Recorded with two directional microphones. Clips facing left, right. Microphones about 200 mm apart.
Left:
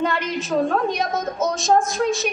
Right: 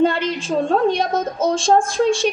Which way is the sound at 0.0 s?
30° right (ahead or behind).